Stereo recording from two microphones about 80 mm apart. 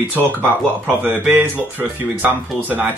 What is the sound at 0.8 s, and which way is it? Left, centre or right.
Speech, right.